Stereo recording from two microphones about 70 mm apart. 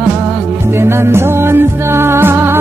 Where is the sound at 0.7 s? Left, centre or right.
Right.